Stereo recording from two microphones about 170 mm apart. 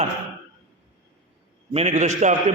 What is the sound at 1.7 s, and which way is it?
Speech, 45° right (ahead or behind).